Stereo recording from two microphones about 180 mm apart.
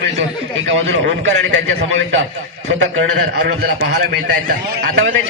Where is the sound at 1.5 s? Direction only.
90° right.